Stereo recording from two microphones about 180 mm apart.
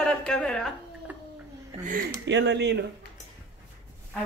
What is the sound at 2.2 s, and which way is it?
Speech, 80° right.